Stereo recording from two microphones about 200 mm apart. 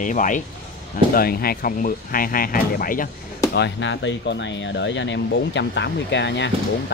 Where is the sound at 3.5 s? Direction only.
60° left (ahead or behind).